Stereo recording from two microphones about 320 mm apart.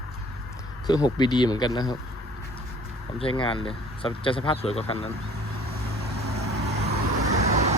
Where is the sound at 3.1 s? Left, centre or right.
Centre.